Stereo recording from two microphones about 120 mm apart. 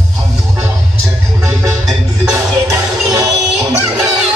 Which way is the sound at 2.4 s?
25° right (ahead or behind).